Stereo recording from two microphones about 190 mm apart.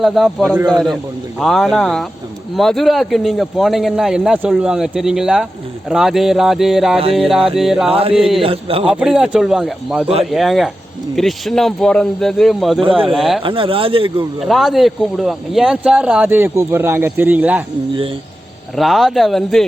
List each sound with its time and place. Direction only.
0.0 s speech: centre (ahead or behind)
7.9 s speech: 30° right (ahead or behind)
8.9 s speech: 5° right (ahead or behind)
13.4 s speech: 30° right (ahead or behind)
14.4 s speech: centre (ahead or behind)
18.8 s speech: centre (ahead or behind)